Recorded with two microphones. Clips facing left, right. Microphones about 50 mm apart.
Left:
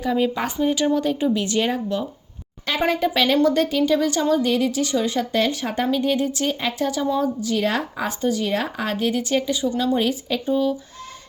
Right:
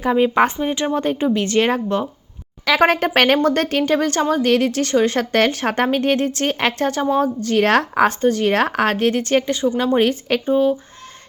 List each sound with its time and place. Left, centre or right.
0.0 s speech: right
2.7 s speech: right
6.6 s speech: right
6.8 s speech: right
7.7 s speech: right
10.5 s speech: right